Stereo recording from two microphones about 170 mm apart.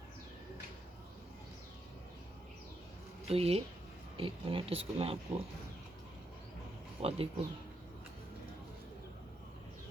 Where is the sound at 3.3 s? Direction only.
35° right (ahead or behind).